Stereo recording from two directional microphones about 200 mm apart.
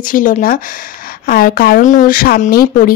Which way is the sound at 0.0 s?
45° left (ahead or behind).